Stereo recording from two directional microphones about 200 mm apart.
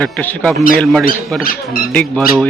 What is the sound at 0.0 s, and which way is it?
Speech, 10° left (ahead or behind).